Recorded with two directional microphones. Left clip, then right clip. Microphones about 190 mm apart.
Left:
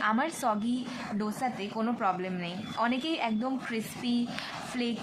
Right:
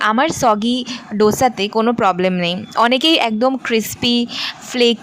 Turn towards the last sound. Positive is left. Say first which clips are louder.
# right 19 dB
turn(degrees=-55)  # may be behind; listen again after turning